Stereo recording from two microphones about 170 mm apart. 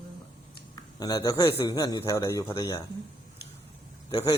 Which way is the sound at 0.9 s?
20° left (ahead or behind).